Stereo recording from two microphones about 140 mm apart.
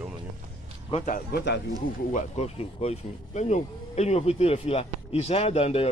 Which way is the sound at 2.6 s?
45° left (ahead or behind).